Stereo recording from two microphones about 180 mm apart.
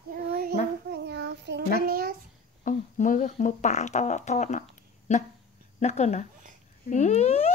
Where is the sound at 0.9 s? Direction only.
70° right (ahead or behind).